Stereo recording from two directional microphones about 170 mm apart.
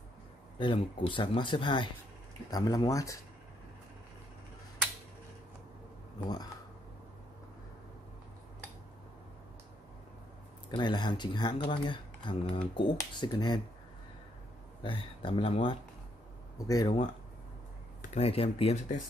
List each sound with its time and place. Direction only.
0.6 s speech: 30° left (ahead or behind)
10.8 s speech: 25° left (ahead or behind)
14.8 s speech: 30° left (ahead or behind)
16.5 s speech: 20° left (ahead or behind)
18.1 s speech: 35° left (ahead or behind)